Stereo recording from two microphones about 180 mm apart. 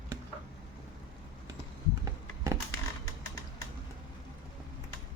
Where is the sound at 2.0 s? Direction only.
15° right (ahead or behind).